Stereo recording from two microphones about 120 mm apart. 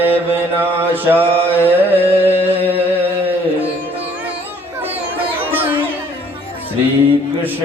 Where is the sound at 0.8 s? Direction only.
15° right (ahead or behind).